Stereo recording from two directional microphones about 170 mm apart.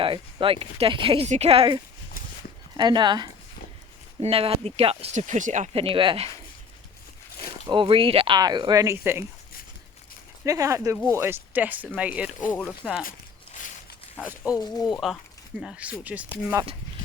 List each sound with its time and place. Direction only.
0.0 s speech: 30° right (ahead or behind)
7.7 s speech: 30° right (ahead or behind); by 9.2 s 15° right (ahead or behind)
10.4 s speech: 20° right (ahead or behind); by 13.1 s centre (ahead or behind)
13.1 s a sound: 50° left (ahead or behind)
14.2 s speech: 5° right (ahead or behind)